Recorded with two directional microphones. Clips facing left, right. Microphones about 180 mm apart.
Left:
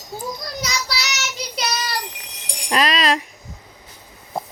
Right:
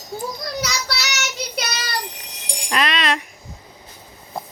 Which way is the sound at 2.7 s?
35° left (ahead or behind).